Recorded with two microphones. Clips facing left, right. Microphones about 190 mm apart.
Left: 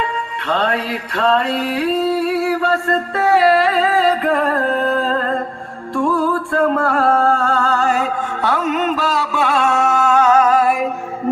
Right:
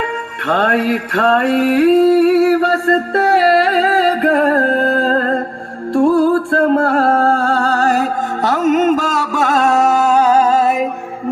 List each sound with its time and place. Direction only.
0.4 s music: 50° right (ahead or behind)
3.6 s music: 70° right (ahead or behind)
5.0 s music: 40° right (ahead or behind)